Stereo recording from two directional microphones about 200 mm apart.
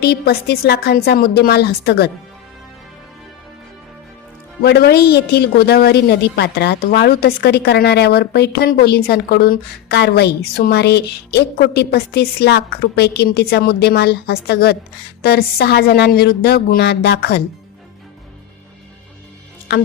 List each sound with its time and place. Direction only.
0.0 s a woman's voice: 55° left (ahead or behind)
4.6 s a woman's voice: 55° left (ahead or behind)
19.7 s music: 55° left (ahead or behind)